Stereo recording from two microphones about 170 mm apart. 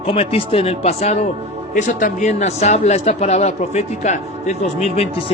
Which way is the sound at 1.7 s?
50° left (ahead or behind).